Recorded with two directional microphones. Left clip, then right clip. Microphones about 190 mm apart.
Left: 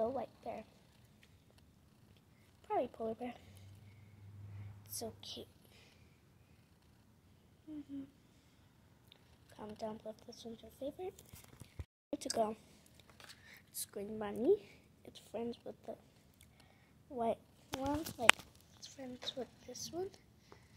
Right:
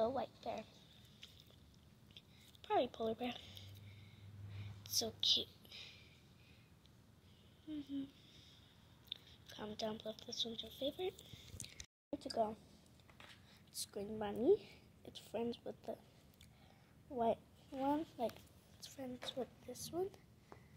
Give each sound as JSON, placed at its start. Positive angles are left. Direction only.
{"t": 0.0, "sound": "a woman's voice", "side_deg": 15}
{"t": 2.6, "sound": "speech", "side_deg": -5}
{"t": 4.9, "sound": "a woman's voice", "side_deg": -5}
{"t": 9.5, "sound": "a woman's voice", "side_deg": -5}
{"t": 12.1, "sound": "speech", "side_deg": 25}
{"t": 13.9, "sound": "a woman's voice", "side_deg": 10}
{"t": 17.1, "sound": "a woman's voice", "side_deg": 0}